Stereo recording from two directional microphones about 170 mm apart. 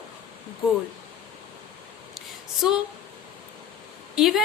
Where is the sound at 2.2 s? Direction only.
Centre (ahead or behind).